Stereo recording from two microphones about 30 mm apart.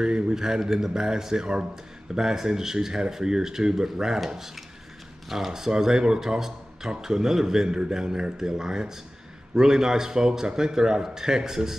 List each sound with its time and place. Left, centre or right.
0.0 s speech: right
5.5 s speech: centre